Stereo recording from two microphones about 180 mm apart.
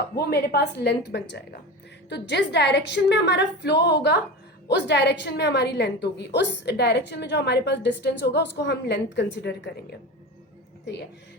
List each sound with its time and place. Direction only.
0.2 s a woman's voice: 60° left (ahead or behind)